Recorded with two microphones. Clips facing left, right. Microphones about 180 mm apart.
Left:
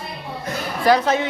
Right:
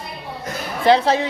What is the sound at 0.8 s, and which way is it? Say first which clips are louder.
Speech: right 2 dB; 30° right (ahead or behind).